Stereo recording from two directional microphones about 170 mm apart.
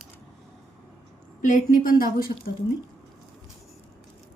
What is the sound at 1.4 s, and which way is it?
Speech, 50° left (ahead or behind).